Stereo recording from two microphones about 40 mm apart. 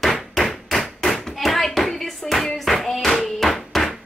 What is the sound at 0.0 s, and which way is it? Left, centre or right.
Hammer, centre.